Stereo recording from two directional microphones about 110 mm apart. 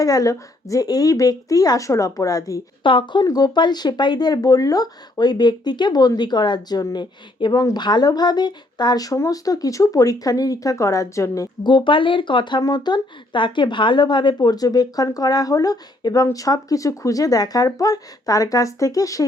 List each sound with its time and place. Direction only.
0.0 s speech: 35° left (ahead or behind)
2.8 s speech: 45° left (ahead or behind)
3.2 s speech: 35° left (ahead or behind)
11.6 s speech: 45° left (ahead or behind)